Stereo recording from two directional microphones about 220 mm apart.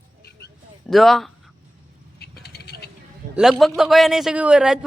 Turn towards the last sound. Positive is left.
turn(degrees=-5)  # may be behind; listen again after turning